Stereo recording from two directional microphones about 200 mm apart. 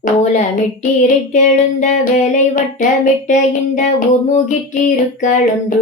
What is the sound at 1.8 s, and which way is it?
Speech, 35° left (ahead or behind).